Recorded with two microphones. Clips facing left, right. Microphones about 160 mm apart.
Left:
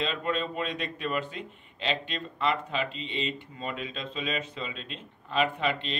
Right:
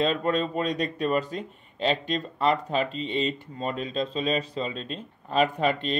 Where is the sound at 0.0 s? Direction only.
40° right (ahead or behind).